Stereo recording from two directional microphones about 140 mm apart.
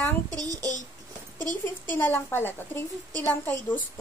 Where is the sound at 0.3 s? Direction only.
25° right (ahead or behind).